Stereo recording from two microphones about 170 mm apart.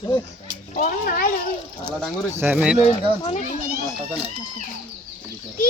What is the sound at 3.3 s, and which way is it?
Speech, 45° left (ahead or behind).